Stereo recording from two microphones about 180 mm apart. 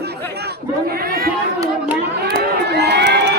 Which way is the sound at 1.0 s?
55° right (ahead or behind).